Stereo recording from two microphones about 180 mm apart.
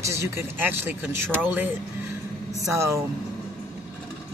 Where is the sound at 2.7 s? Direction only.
15° right (ahead or behind).